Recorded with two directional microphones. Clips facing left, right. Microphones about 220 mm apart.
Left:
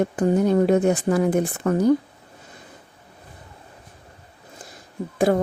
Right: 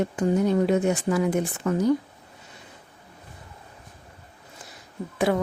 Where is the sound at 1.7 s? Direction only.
55° left (ahead or behind).